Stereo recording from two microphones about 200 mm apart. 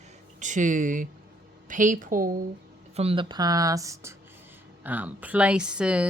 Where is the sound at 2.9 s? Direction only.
25° right (ahead or behind).